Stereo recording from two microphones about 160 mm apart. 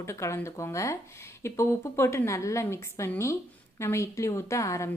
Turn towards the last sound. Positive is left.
turn(degrees=20)  # may be behind; listen again after turning